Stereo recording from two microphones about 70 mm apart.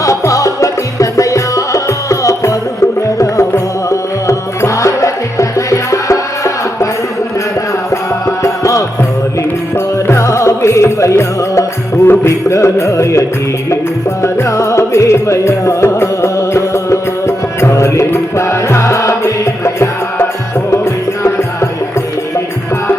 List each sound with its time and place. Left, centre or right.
0.0 s music: left
8.4 s music: left